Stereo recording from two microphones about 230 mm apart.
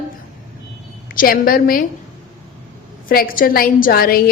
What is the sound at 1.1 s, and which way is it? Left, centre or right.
Speech, left.